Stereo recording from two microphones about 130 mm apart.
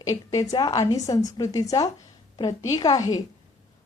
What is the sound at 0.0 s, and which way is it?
A woman's voice, 25° left (ahead or behind).